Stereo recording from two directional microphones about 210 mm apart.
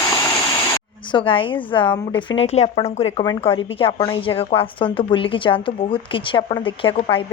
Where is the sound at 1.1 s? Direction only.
25° left (ahead or behind).